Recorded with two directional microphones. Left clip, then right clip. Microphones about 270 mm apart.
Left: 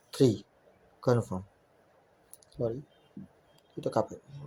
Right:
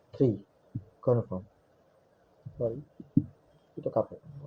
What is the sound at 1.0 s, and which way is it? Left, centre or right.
Speech, left.